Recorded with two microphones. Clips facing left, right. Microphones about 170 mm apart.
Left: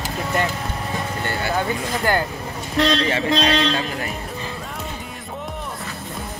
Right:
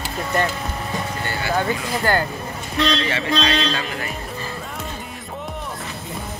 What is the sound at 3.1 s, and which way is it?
Speech, 40° left (ahead or behind).